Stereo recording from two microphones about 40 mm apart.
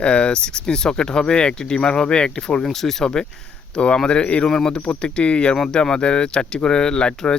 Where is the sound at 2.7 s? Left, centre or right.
Centre.